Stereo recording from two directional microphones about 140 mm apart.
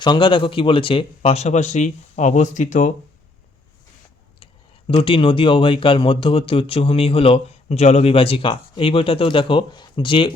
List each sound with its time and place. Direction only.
0.0 s speech: 35° left (ahead or behind); by 2.9 s 65° left (ahead or behind)
4.9 s speech: 40° left (ahead or behind)